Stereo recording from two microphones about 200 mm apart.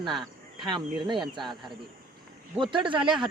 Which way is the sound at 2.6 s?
25° right (ahead or behind).